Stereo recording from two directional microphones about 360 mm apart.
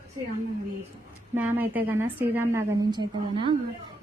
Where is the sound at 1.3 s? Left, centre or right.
Centre.